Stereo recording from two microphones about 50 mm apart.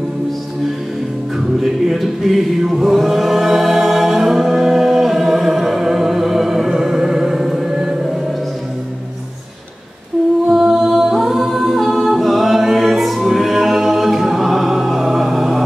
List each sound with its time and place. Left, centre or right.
1.6 s chant: centre
10.5 s a capella: centre